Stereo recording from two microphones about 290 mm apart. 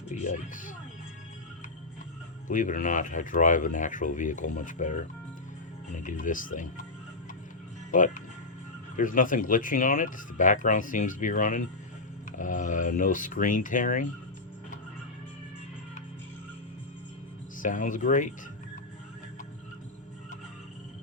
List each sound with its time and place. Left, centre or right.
0.1 s speech: left
2.5 s speech: left
7.9 s speech: left
17.6 s speech: left